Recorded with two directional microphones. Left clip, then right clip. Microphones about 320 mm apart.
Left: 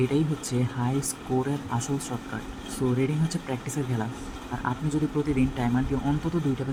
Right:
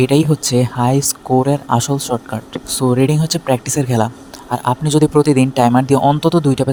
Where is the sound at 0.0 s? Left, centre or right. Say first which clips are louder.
Right 13 dB; right.